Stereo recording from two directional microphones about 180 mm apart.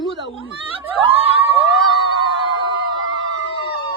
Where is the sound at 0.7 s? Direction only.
30° right (ahead or behind).